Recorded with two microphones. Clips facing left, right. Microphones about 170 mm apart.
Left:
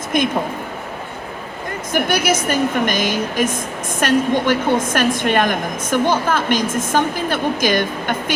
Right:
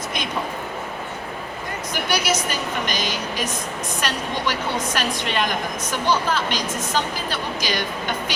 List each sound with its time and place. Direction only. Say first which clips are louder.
0.1 s a woman's voice: left 14 dB; 50° left (ahead or behind)
1.9 s a woman's voice: left 6 dB; 50° left (ahead or behind)